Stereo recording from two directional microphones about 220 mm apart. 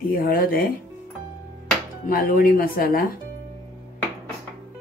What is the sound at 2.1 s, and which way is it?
Speech, 40° left (ahead or behind).